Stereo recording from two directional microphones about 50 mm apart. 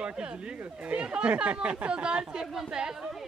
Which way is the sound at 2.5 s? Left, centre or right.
Centre.